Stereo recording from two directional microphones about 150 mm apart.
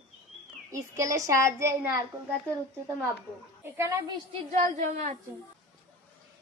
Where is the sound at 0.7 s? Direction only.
20° right (ahead or behind).